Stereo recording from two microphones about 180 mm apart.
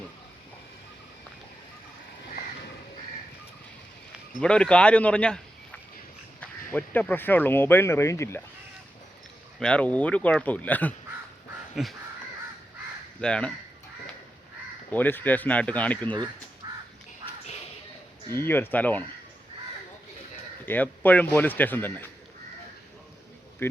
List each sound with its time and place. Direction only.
4.4 s speech: 5° left (ahead or behind)
9.6 s speech: 5° left (ahead or behind)
11.7 s crow: centre (ahead or behind)
13.2 s speech: 5° left (ahead or behind)
14.8 s speech: 10° left (ahead or behind)
16.6 s crow: 20° right (ahead or behind)
18.4 s speech: 10° left (ahead or behind)
20.7 s speech: 10° left (ahead or behind)